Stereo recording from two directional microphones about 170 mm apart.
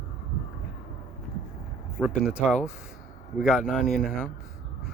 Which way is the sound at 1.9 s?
5° right (ahead or behind).